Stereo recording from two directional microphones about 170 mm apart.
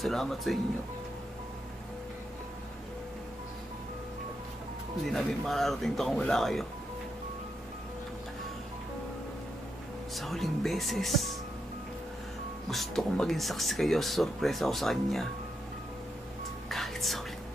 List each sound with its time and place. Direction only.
0.0 s speech: centre (ahead or behind)
5.0 s speech: centre (ahead or behind)
10.1 s speech: centre (ahead or behind)
12.6 s speech: centre (ahead or behind)
16.6 s music: centre (ahead or behind)